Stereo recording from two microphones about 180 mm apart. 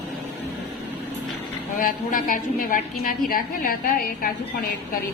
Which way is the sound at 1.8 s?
50° left (ahead or behind).